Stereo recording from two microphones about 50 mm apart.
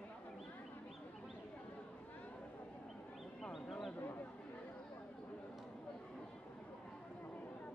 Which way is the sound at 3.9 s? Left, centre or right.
Left.